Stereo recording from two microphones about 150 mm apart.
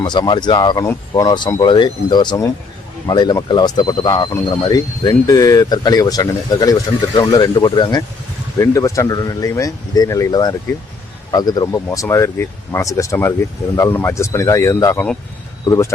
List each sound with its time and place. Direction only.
0.0 s speech: 30° left (ahead or behind)